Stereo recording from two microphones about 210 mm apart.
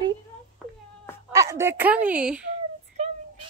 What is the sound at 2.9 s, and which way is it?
Child singing, 30° right (ahead or behind).